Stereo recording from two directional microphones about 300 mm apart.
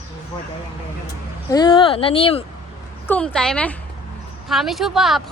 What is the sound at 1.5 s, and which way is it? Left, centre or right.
Speech, centre.